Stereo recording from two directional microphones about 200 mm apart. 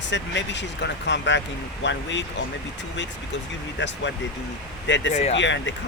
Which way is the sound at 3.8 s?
65° left (ahead or behind).